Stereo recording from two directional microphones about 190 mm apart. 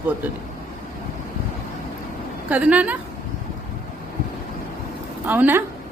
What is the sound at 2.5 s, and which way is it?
Speech, 5° right (ahead or behind).